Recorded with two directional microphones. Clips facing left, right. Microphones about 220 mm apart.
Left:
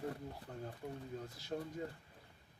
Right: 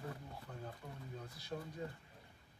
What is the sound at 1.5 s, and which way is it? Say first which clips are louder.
Speech: left 3 dB; 40° left (ahead or behind).